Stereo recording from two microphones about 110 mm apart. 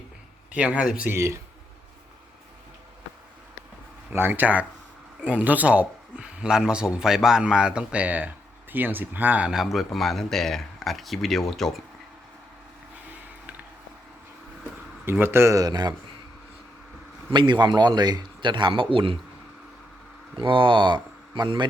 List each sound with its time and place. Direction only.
0.5 s speech: 10° right (ahead or behind)
1.1 s speech: 25° right (ahead or behind)
4.1 s speech: 20° right (ahead or behind); by 11.8 s 5° left (ahead or behind)
15.0 s speech: 20° right (ahead or behind); by 16.0 s 35° right (ahead or behind)
17.3 s a man's voice: 45° right (ahead or behind)
20.3 s speech: 50° right (ahead or behind)